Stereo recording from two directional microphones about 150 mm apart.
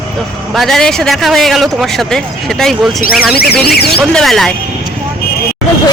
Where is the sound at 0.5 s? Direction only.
Centre (ahead or behind).